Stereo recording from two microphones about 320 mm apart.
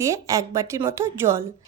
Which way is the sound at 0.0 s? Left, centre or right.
Centre.